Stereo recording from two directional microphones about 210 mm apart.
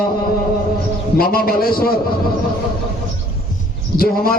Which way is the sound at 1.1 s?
45° left (ahead or behind).